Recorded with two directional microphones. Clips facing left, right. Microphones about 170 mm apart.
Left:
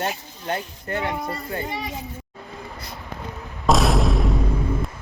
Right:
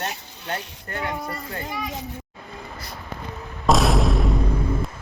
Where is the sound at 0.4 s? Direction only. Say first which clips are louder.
Left 4 dB; 20° left (ahead or behind).